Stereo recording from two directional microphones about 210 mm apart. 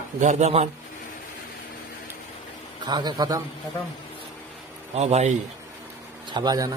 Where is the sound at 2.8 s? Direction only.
20° right (ahead or behind).